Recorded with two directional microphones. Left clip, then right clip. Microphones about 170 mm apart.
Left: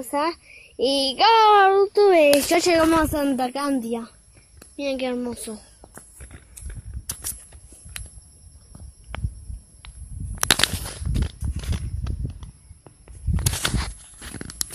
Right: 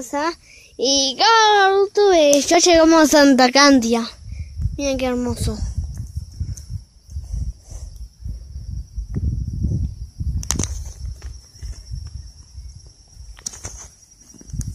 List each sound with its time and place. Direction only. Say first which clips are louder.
0.0 s a child's voice: right 1 dB; 5° right (ahead or behind)
2.3 s a woman's voice: right 5 dB; 25° right (ahead or behind)
4.7 s a woman's voice: right 4 dB; 25° right (ahead or behind)